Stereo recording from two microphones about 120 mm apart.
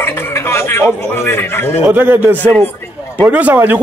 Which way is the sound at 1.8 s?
15° right (ahead or behind).